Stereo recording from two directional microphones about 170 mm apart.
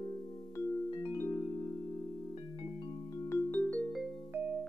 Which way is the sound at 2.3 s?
35° left (ahead or behind).